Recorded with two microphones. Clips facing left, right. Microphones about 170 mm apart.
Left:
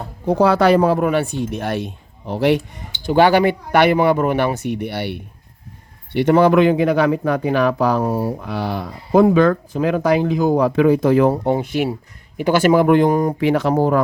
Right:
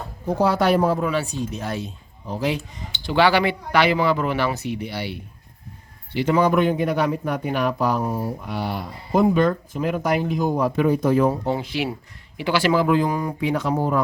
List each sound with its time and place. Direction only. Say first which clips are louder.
0.3 s speech: left 5 dB; 85° left; by 13.3 s 50° left (ahead or behind)
13.4 s speech: left 3 dB; 70° left (ahead or behind)